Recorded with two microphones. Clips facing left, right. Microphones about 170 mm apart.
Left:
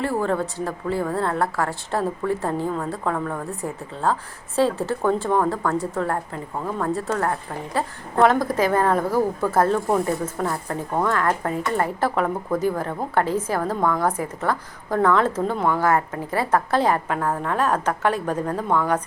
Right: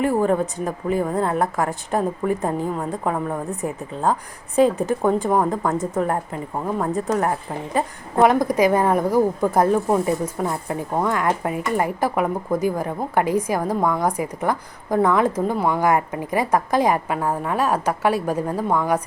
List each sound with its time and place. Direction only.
0.0 s a woman's voice: 15° right (ahead or behind)